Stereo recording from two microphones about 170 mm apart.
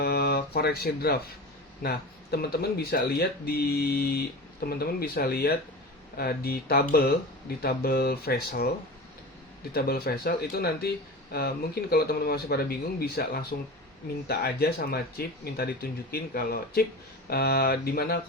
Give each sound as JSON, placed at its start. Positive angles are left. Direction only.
{"t": 0.0, "sound": "speech", "side_deg": 65}
{"t": 9.7, "sound": "speech", "side_deg": 65}